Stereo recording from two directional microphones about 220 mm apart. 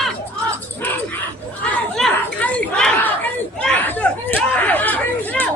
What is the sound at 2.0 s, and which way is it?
Chatter, 5° left (ahead or behind).